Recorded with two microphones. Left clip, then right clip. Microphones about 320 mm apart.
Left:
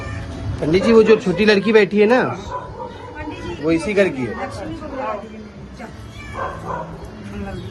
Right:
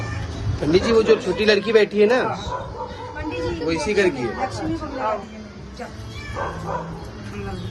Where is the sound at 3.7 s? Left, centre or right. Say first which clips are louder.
Left 5 dB; centre.